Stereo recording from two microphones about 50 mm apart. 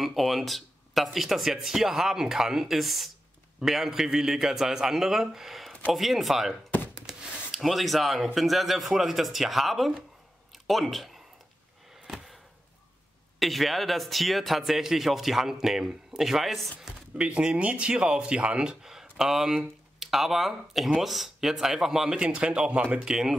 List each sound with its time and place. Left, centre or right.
0.0 s a man's voice: centre
7.1 s a sound: centre
7.5 s a man's voice: centre
10.5 s a sound: centre
13.4 s a man's voice: centre
17.2 s a man's voice: right
22.1 s speech: right
23.0 s a man's voice: centre